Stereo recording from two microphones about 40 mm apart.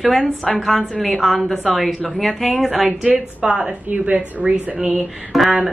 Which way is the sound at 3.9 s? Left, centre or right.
Right.